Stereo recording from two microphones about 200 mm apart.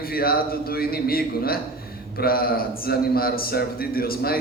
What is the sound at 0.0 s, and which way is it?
A man's voice, 50° left (ahead or behind).